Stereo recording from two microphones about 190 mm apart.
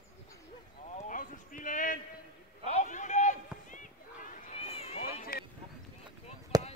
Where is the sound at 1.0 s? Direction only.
45° left (ahead or behind).